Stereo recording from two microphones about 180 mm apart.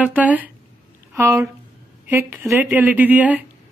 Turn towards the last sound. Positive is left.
turn(degrees=-10)  # may be behind; listen again after turning